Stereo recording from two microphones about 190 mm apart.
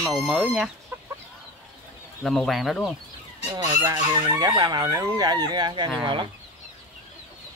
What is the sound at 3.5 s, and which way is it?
Fowl, 15° right (ahead or behind).